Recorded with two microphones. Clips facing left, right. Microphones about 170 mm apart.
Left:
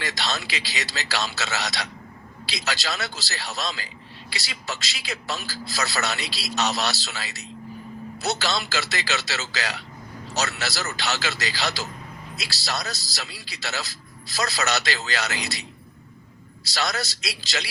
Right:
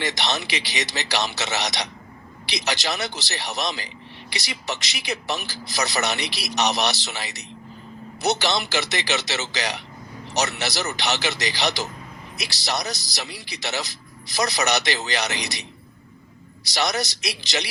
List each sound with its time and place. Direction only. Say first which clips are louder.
0.0 s a man's voice: right 3 dB; 20° right (ahead or behind)
16.6 s a man's voice: right 3 dB; 15° right (ahead or behind)